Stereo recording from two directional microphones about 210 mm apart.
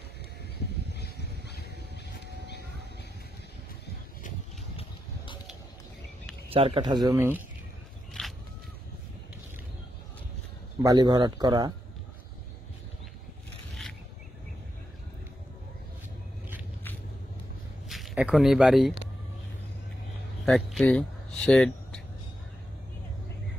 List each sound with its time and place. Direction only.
0.9 s a sound: 50° left (ahead or behind)
4.7 s a sound: 25° left (ahead or behind)
6.5 s speech: 25° right (ahead or behind)
7.1 s speech: 10° right (ahead or behind)
10.8 s speech: 20° right (ahead or behind)
17.8 s speech: centre (ahead or behind)
20.4 s speech: 5° left (ahead or behind)